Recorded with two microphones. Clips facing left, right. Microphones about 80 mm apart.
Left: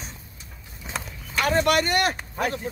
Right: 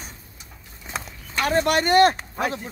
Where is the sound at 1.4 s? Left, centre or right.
Right.